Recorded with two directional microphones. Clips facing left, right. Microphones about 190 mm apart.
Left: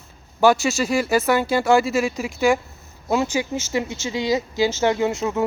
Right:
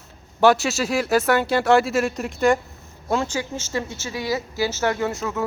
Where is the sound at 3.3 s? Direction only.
10° left (ahead or behind).